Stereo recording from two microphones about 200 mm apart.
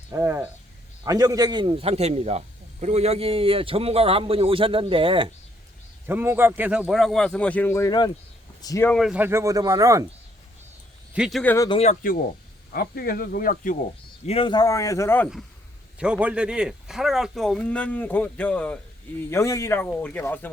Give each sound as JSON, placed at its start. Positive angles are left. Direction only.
{"t": 0.1, "sound": "speech", "side_deg": -10}
{"t": 6.1, "sound": "speech", "side_deg": -10}
{"t": 9.0, "sound": "speech", "side_deg": -5}
{"t": 11.1, "sound": "speech", "side_deg": 0}
{"t": 11.5, "sound": "speech", "side_deg": 15}
{"t": 11.8, "sound": "speech", "side_deg": 40}
{"t": 14.3, "sound": "speech", "side_deg": 25}
{"t": 16.0, "sound": "speech", "side_deg": -5}